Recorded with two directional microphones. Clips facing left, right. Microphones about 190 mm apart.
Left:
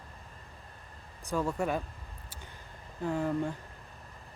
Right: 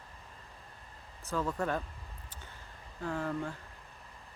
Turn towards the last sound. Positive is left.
turn(degrees=15)  # may be behind; listen again after turning